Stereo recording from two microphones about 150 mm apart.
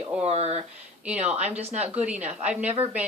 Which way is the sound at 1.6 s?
45° right (ahead or behind).